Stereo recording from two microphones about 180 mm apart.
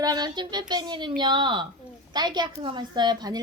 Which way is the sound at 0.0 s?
25° right (ahead or behind).